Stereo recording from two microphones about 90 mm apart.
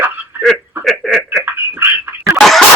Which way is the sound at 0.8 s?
Centre (ahead or behind).